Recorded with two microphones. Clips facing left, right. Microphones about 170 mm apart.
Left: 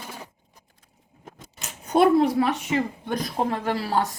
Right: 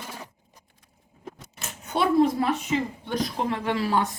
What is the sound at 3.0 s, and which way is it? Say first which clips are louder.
A woman's voice: left 1 dB; 45° left (ahead or behind).